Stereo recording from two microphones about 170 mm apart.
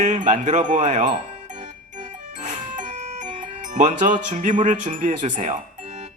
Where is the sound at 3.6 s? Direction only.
50° right (ahead or behind).